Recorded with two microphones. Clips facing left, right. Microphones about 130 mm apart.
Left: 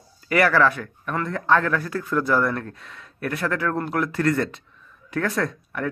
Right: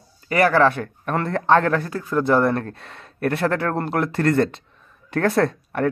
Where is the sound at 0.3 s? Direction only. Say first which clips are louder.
Right 2 dB; 30° right (ahead or behind).